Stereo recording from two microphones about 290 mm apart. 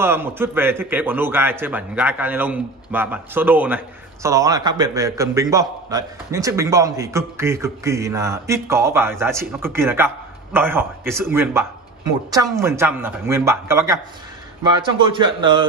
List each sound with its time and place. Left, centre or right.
0.0 s a man's voice: centre